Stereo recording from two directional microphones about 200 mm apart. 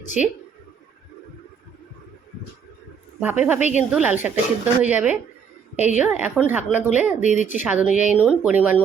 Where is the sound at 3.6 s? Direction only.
35° left (ahead or behind).